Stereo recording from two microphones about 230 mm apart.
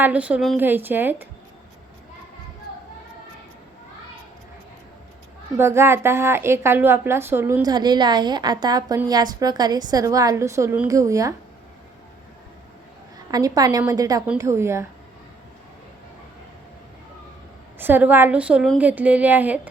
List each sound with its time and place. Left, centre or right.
0.0 s a woman's voice: centre
5.5 s a woman's voice: centre
13.3 s a woman's voice: centre
17.7 s a woman's voice: centre